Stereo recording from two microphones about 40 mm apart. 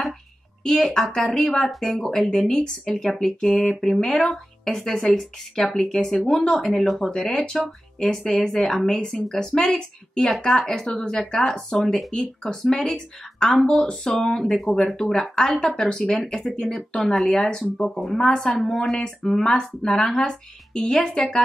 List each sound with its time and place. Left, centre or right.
0.7 s speech: centre
2.5 s speech: centre
5.9 s speech: left
6.2 s speech: centre
13.6 s speech: centre
14.0 s speech: centre